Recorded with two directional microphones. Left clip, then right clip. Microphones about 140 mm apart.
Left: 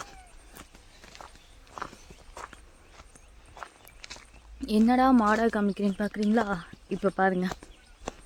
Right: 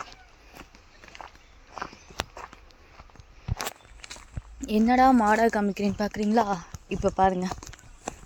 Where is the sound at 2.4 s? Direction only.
75° right (ahead or behind).